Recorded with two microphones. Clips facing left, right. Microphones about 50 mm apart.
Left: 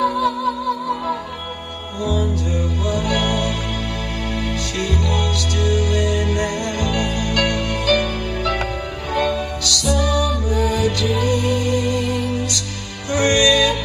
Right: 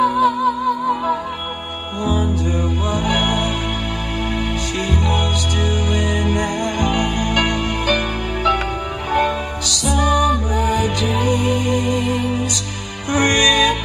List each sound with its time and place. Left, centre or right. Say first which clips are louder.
0.0 s music: right 3 dB; right